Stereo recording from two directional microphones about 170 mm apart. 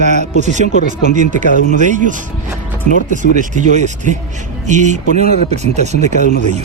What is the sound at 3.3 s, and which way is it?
Speech, 45° right (ahead or behind).